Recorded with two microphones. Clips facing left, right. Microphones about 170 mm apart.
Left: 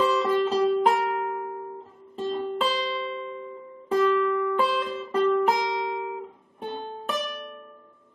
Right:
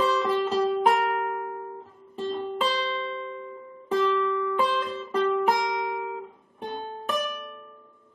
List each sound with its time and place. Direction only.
0.0 s music: centre (ahead or behind)
2.7 s music: 10° left (ahead or behind)
5.5 s music: 25° left (ahead or behind)
7.1 s music: centre (ahead or behind)